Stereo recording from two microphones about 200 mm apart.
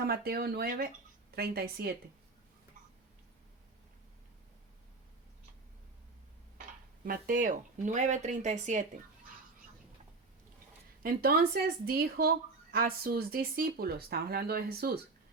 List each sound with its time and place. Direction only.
0.0 s speech: 50° right (ahead or behind)
7.0 s speech: 45° right (ahead or behind)
11.0 s speech: 50° right (ahead or behind)